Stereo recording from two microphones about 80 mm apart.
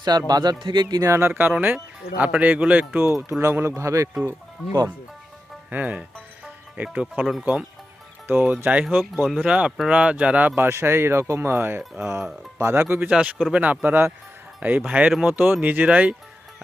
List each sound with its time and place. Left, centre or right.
0.0 s speech: right
0.6 s speech: right
1.0 s speech: right
3.0 s speech: right
5.7 s music: centre
8.3 s speech: right
9.0 s speech: centre
9.5 s speech: centre
10.5 s speech: right
11.8 s speech: centre
12.7 s speech: right
13.1 s speech: centre
15.3 s speech: right